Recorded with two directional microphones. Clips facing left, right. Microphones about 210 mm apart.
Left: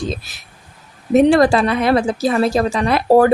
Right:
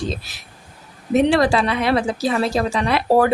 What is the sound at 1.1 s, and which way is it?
Speech, 45° left (ahead or behind).